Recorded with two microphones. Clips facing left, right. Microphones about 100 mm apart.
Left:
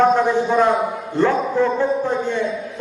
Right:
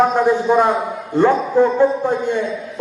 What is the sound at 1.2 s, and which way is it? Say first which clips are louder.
Speech: right 4 dB; 15° right (ahead or behind).